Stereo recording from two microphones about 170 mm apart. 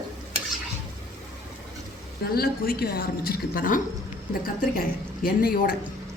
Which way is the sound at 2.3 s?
65° left (ahead or behind).